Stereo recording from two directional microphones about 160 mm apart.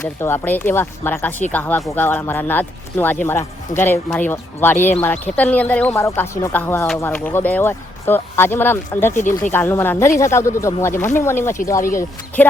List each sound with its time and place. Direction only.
0.2 s speech: 15° left (ahead or behind)
9.1 s speech: 50° left (ahead or behind)
9.5 s speech: 15° left (ahead or behind)